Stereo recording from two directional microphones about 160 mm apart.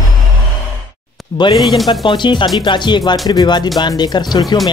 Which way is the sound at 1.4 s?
25° left (ahead or behind).